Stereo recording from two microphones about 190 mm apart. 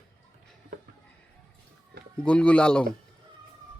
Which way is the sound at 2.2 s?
5° left (ahead or behind).